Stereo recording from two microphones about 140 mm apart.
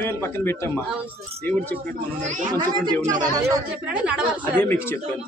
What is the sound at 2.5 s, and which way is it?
Speech, 30° right (ahead or behind).